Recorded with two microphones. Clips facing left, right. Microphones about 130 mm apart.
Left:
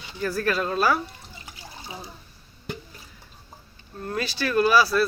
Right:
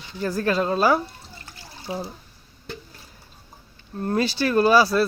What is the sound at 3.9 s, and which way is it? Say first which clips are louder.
Speech: right 6 dB; 35° right (ahead or behind).